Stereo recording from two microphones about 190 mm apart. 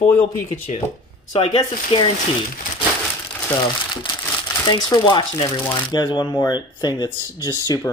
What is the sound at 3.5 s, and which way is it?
Speech, 25° left (ahead or behind).